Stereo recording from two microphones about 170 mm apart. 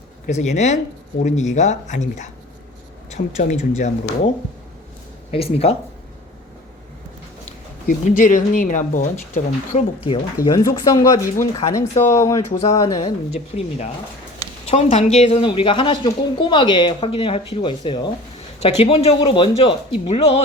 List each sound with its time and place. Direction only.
0.3 s speech: 45° left (ahead or behind)
5.3 s a woman's voice: 35° left (ahead or behind)
7.4 s speech: 50° left (ahead or behind)
10.1 s speech: 25° left (ahead or behind)
12.5 s a woman's voice: 35° left (ahead or behind)
12.7 s speech: 20° left (ahead or behind)
13.3 s a woman's voice: 40° left (ahead or behind)